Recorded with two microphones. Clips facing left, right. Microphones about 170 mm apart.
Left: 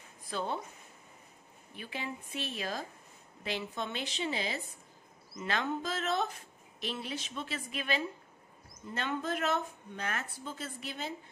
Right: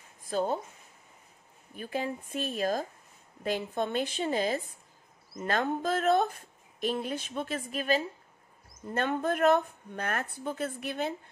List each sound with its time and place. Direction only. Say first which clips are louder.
0.2 s speech: right 6 dB; 45° right (ahead or behind)
1.7 s speech: right 7 dB; 45° right (ahead or behind)